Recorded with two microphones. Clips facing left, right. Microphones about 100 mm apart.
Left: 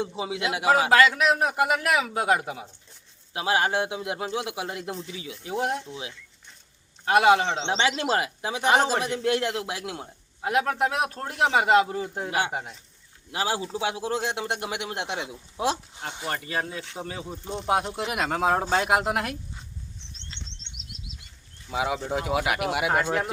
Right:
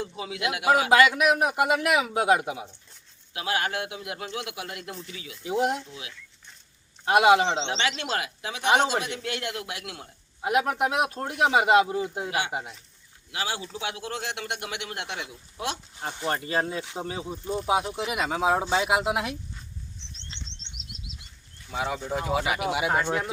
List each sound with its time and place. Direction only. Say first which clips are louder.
0.0 s speech: left 2 dB; 25° left (ahead or behind)
0.9 s a man's voice: right 2 dB; 15° right (ahead or behind)
3.3 s speech: left 4 dB; 30° left (ahead or behind)
5.5 s a man's voice: right 2 dB; 20° right (ahead or behind)
5.9 s speech: left 5 dB; 30° left (ahead or behind)
7.0 s speech: even; 20° right (ahead or behind)
7.7 s speech: left 4 dB; 35° left (ahead or behind)
10.4 s speech: even; 15° right (ahead or behind)
13.3 s speech: left 4 dB; 35° left (ahead or behind)
16.2 s a man's voice: right 3 dB; 30° right (ahead or behind)
17.4 s speech: right 5 dB; 20° left (ahead or behind)
17.7 s speech: left 1 dB; centre (ahead or behind)
20.3 s bird flight: even; 25° right (ahead or behind)
21.7 s speech: left 2 dB; 5° left (ahead or behind)